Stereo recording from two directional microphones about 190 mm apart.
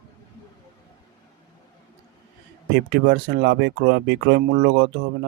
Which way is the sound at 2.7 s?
60° right (ahead or behind).